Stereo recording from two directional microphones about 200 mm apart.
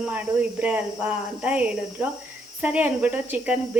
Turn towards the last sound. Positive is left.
turn(degrees=-5)  # may be behind; listen again after turning